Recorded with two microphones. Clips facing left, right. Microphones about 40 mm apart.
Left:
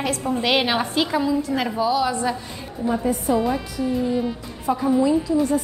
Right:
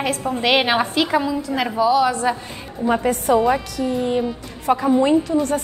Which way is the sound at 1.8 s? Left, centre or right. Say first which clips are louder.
Right 6 dB; right.